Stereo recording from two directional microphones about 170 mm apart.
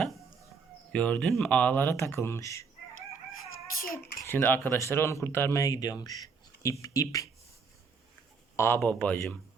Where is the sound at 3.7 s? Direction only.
55° left (ahead or behind).